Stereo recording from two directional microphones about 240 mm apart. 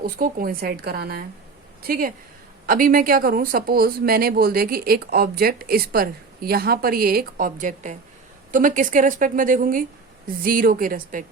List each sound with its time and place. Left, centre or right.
0.0 s speech: right